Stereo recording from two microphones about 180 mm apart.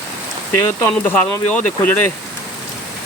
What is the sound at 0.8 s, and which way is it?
Speech, 10° left (ahead or behind).